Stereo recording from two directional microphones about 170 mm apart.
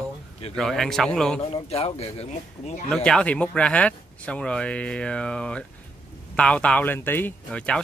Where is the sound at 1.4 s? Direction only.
40° left (ahead or behind).